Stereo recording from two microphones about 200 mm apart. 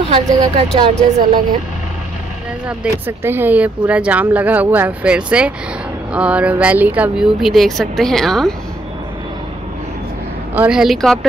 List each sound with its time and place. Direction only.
0.1 s speech: 25° right (ahead or behind)
2.8 s speech: 10° right (ahead or behind)
10.5 s speech: 5° right (ahead or behind)